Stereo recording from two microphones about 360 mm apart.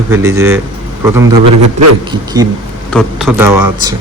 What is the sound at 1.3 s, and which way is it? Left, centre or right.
Speech, right.